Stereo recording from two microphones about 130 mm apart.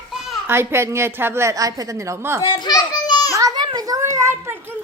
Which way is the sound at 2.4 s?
30° left (ahead or behind).